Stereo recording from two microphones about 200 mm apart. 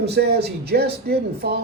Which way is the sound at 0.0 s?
55° right (ahead or behind).